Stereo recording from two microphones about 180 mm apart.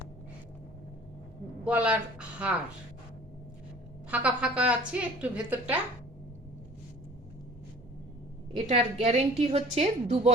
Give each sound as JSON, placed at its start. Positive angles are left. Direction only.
{"t": 1.6, "sound": "a woman's voice", "side_deg": -5}
{"t": 4.1, "sound": "a woman's voice", "side_deg": -5}
{"t": 8.5, "sound": "a woman's voice", "side_deg": -35}